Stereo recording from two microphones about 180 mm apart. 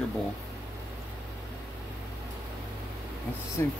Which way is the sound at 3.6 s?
15° left (ahead or behind).